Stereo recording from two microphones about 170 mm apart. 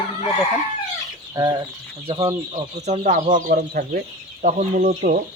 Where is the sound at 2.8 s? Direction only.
40° right (ahead or behind).